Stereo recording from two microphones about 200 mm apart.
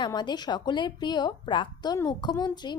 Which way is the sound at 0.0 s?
20° left (ahead or behind).